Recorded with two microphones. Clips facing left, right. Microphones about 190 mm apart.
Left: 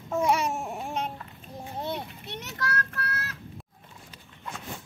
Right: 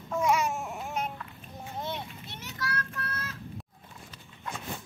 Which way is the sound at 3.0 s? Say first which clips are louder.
Left 3 dB; 70° left (ahead or behind).